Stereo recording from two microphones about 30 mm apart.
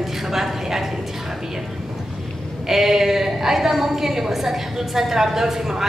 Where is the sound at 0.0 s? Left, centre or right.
Centre.